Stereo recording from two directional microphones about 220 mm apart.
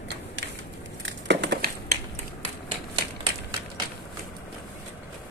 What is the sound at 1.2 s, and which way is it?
Crushing, 50° right (ahead or behind).